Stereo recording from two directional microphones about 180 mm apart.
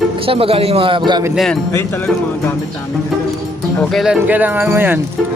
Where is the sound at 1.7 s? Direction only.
10° left (ahead or behind).